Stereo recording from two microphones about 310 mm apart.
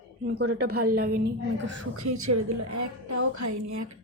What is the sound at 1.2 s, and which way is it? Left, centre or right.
Speech, right.